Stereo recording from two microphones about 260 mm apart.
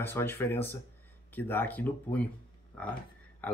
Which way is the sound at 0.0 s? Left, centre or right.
Centre.